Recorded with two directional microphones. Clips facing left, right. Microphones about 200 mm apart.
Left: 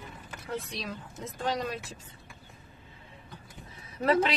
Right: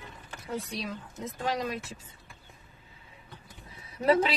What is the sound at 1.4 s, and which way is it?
Speech, 5° right (ahead or behind).